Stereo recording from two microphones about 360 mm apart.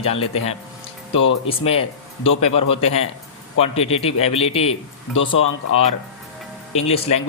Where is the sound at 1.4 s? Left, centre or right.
Centre.